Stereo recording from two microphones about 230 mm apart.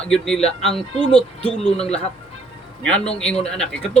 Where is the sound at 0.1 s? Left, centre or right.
Centre.